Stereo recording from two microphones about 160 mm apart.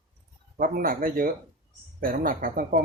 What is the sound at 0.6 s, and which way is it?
Speech, 60° right (ahead or behind).